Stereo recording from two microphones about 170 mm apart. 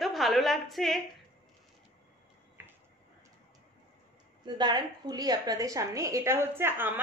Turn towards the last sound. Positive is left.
turn(degrees=-15)  # may be behind; listen again after turning